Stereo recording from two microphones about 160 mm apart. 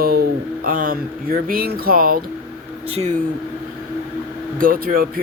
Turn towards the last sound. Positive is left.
turn(degrees=-65)  # may be behind; listen again after turning